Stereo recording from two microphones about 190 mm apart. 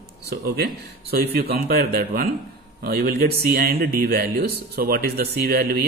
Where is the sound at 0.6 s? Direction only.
55° right (ahead or behind).